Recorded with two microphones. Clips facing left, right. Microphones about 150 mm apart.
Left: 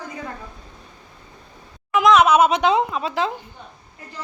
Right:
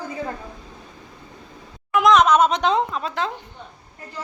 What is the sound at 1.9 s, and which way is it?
Speech, centre (ahead or behind).